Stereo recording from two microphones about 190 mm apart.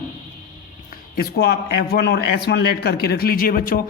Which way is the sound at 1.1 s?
55° left (ahead or behind).